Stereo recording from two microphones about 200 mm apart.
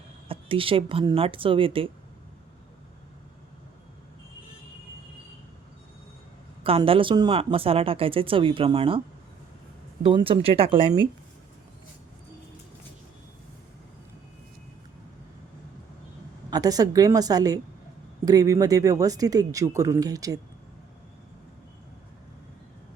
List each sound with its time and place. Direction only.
0.3 s speech: 25° right (ahead or behind)
6.6 s speech: 30° right (ahead or behind)
10.0 s speech: 25° right (ahead or behind)
16.5 s speech: 20° right (ahead or behind)